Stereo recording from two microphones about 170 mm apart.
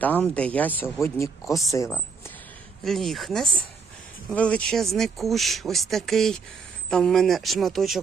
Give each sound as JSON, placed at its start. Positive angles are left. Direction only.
{"t": 0.0, "sound": "speech", "side_deg": 10}
{"t": 2.8, "sound": "speech", "side_deg": 0}